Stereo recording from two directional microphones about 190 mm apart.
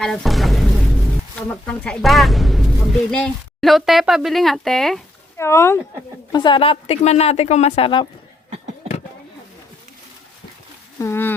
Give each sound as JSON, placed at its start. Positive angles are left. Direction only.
{"t": 0.0, "sound": "speech", "side_deg": 0}
{"t": 5.4, "sound": "speech", "side_deg": 15}
{"t": 6.3, "sound": "a woman's voice", "side_deg": 25}
{"t": 11.0, "sound": "speech", "side_deg": 10}